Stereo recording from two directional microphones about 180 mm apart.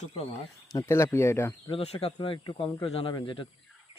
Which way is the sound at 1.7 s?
35° left (ahead or behind).